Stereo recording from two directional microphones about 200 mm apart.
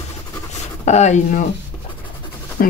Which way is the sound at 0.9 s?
35° left (ahead or behind).